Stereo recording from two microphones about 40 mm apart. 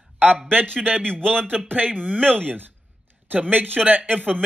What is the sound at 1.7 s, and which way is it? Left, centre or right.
A man's voice, right.